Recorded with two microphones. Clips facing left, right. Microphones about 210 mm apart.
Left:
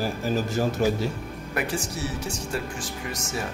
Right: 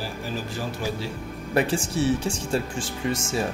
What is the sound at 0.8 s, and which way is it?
Speech, 45° left (ahead or behind).